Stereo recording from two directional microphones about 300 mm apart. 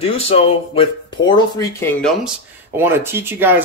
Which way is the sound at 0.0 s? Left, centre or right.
Centre.